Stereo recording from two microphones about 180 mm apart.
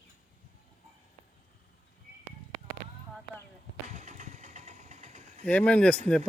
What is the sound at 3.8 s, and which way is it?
Vehicle, 40° right (ahead or behind).